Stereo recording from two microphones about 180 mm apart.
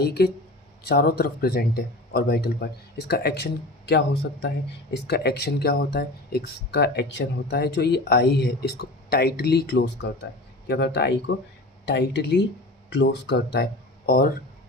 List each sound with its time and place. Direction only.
0.0 s speech: 60° left (ahead or behind)
14.1 s speech: 55° left (ahead or behind)